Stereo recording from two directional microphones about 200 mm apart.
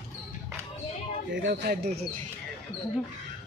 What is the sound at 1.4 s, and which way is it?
Speech, 50° right (ahead or behind).